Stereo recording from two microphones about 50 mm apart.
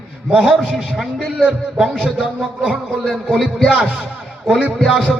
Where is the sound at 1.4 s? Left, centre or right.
Centre.